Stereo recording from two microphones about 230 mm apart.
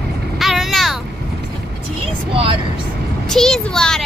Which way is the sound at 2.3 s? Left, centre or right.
Right.